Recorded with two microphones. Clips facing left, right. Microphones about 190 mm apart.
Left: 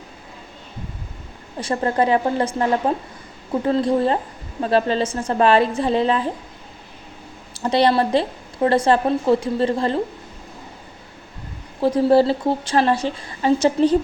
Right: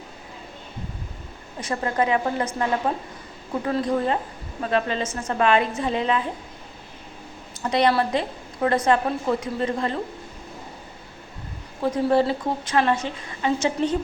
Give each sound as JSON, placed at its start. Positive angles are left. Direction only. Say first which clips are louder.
{"t": 1.6, "sound": "a woman's voice", "louder": "left 4 dB", "side_deg": 35}
{"t": 7.5, "sound": "a woman's voice", "louder": "left 3 dB", "side_deg": 30}
{"t": 11.8, "sound": "a woman's voice", "louder": "left 5 dB", "side_deg": 30}